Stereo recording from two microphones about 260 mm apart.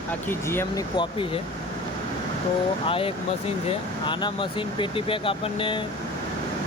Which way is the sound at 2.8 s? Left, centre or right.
Left.